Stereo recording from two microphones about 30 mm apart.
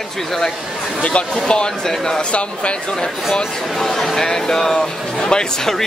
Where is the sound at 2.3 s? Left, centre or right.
Left.